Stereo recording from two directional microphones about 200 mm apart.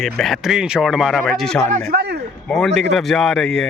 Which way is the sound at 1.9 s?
55° right (ahead or behind).